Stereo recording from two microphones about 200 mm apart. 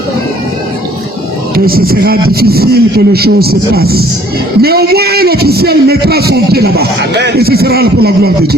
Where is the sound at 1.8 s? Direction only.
50° right (ahead or behind).